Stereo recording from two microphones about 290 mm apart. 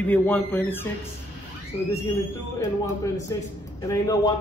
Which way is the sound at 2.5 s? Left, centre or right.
Centre.